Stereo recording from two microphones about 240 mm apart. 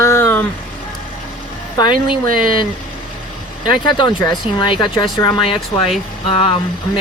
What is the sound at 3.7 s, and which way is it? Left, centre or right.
Speech, centre.